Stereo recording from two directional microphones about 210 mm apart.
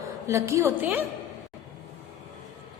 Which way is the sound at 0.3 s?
15° right (ahead or behind).